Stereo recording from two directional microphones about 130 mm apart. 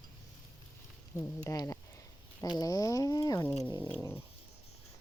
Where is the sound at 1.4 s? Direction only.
25° left (ahead or behind).